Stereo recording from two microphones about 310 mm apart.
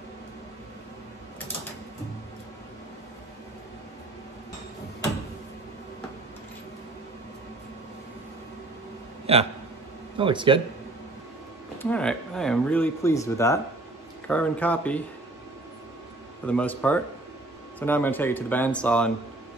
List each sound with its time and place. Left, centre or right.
9.2 s a sound: centre
10.1 s speech: centre
11.8 s speech: centre
16.4 s speech: centre